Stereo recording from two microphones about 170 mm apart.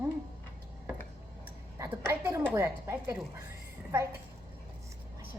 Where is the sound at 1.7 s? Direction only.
15° right (ahead or behind).